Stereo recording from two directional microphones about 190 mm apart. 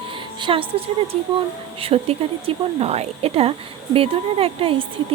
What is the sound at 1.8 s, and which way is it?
A woman's voice, 30° right (ahead or behind).